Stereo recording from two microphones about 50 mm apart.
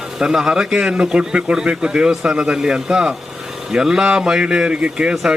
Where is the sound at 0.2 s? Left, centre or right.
Centre.